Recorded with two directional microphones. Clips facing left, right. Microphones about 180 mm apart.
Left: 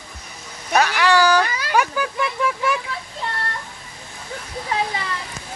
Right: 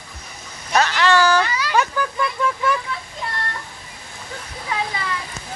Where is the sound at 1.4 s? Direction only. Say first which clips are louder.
Right 2 dB; 50° left (ahead or behind).